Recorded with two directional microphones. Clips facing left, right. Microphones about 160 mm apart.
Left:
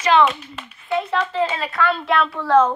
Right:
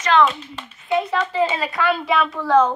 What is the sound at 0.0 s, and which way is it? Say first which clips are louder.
A woman's voice: left 1 dB; 5° left (ahead or behind).